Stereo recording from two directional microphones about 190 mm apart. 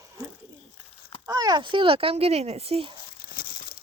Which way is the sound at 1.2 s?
20° right (ahead or behind).